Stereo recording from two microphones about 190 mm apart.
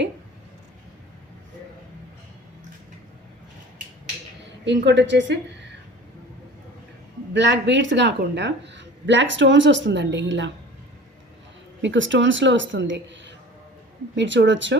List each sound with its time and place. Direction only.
4.6 s speech: 70° right (ahead or behind)
7.3 s speech: 70° right (ahead or behind)
11.8 s speech: 75° right (ahead or behind)